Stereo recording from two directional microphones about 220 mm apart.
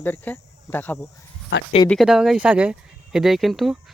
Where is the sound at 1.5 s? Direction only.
50° left (ahead or behind).